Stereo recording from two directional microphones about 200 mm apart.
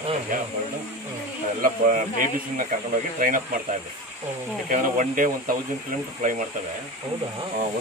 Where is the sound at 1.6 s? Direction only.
45° right (ahead or behind).